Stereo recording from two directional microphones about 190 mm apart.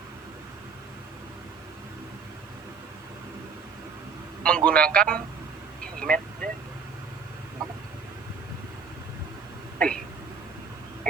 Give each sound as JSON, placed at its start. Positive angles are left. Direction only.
{"t": 4.4, "sound": "speech", "side_deg": 5}
{"t": 6.0, "sound": "vehicle", "side_deg": 5}
{"t": 9.7, "sound": "a sound", "side_deg": 5}